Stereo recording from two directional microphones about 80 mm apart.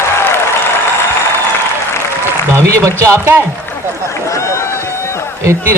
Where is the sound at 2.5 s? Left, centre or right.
Right.